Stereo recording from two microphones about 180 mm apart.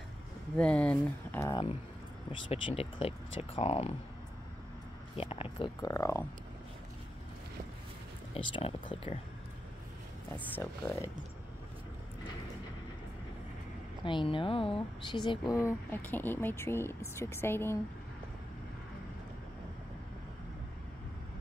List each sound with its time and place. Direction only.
0.6 s speech: 5° left (ahead or behind)
1.4 s speech: 25° left (ahead or behind)
5.1 s speech: 30° left (ahead or behind); by 6.2 s 15° left (ahead or behind)
8.4 s speech: 30° left (ahead or behind)
10.3 s speech: 15° left (ahead or behind)
14.0 s speech: 30° left (ahead or behind)